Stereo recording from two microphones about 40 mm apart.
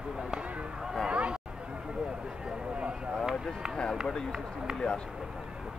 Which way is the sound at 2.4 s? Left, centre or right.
Right.